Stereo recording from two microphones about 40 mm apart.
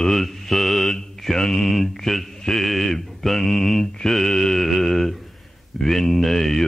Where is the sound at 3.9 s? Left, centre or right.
Centre.